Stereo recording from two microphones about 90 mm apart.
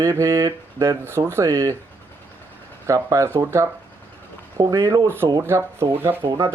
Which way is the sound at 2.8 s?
35° right (ahead or behind).